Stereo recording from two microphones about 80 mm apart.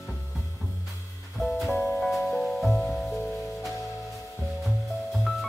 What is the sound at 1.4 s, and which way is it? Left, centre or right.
Music, centre.